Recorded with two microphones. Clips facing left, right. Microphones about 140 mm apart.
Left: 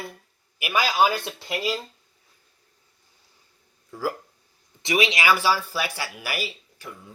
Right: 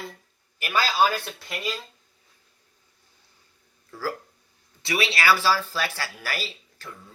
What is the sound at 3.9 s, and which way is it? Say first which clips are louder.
Speech: left 2 dB; 15° left (ahead or behind).